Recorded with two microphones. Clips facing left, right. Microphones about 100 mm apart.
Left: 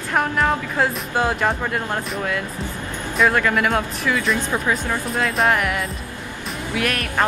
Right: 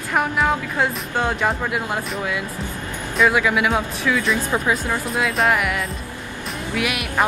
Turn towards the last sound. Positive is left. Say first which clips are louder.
# left 1 dB
turn(degrees=-10)  # may be behind; listen again after turning